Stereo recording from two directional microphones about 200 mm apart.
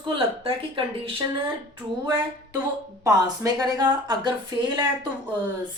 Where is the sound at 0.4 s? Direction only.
25° right (ahead or behind).